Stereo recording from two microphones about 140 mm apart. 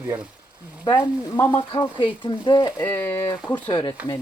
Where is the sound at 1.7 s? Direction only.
35° left (ahead or behind).